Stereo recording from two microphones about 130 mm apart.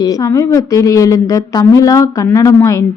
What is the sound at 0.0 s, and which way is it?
A woman's voice, 25° left (ahead or behind).